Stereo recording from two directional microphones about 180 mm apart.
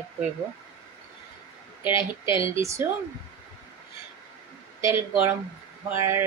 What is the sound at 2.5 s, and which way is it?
Speech, 15° right (ahead or behind).